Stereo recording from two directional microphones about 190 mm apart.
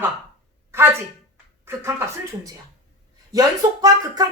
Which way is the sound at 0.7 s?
15° right (ahead or behind).